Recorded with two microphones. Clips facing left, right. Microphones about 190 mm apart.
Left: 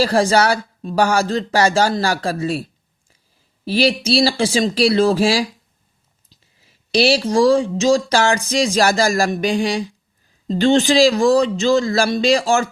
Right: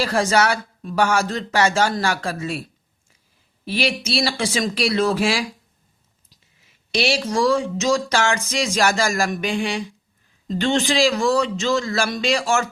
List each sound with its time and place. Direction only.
0.0 s speech: 35° left (ahead or behind)
3.7 s speech: 35° left (ahead or behind)
6.6 s speech: 35° left (ahead or behind)